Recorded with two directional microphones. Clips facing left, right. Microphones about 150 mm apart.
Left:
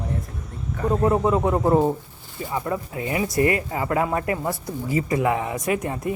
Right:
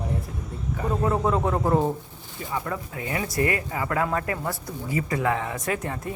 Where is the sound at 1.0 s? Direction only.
10° left (ahead or behind).